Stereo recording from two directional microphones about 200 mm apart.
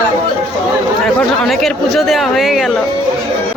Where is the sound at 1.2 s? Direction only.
Centre (ahead or behind).